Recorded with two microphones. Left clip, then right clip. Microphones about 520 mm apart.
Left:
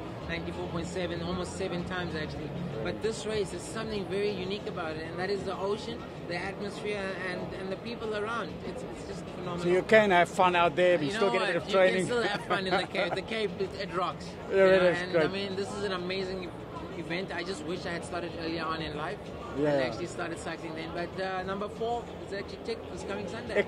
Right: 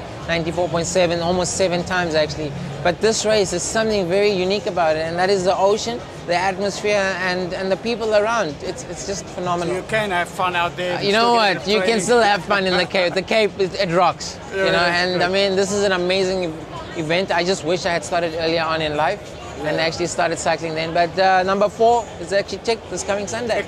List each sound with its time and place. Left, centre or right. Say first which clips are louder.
0.3 s speech: right 17 dB; right
9.7 s speech: right 1 dB; left
11.1 s speech: right 13 dB; right